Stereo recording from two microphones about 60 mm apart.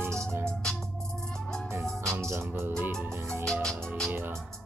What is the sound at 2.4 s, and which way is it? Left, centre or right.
Music, right.